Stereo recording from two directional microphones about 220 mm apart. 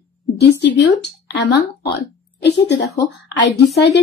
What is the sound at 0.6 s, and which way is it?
Speech, 50° left (ahead or behind).